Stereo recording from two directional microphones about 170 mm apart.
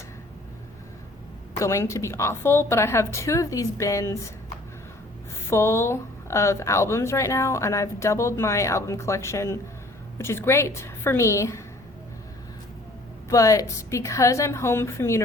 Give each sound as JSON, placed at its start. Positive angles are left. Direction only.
{"t": 1.5, "sound": "speech", "side_deg": 15}
{"t": 5.5, "sound": "speech", "side_deg": 15}
{"t": 13.3, "sound": "speech", "side_deg": 20}